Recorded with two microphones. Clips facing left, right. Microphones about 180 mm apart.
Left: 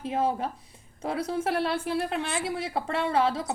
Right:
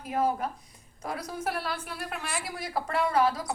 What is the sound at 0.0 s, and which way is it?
A woman's voice, 25° left (ahead or behind).